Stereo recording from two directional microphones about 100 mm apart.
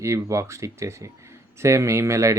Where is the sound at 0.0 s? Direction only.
30° right (ahead or behind).